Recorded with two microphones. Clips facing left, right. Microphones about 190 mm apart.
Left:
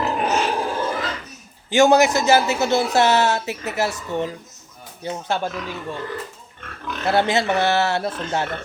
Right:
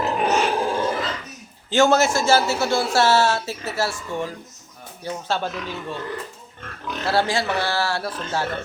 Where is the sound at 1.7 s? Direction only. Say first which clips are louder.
Left 3 dB; 15° left (ahead or behind).